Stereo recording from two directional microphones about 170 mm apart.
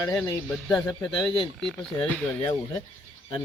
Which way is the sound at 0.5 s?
5° left (ahead or behind).